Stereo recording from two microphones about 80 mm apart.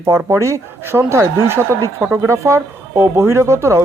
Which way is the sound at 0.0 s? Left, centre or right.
Right.